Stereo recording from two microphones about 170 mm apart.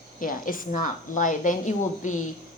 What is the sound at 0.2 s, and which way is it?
A woman's voice, 55° left (ahead or behind).